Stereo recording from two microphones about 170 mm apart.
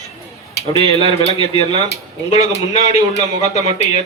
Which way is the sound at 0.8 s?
40° left (ahead or behind).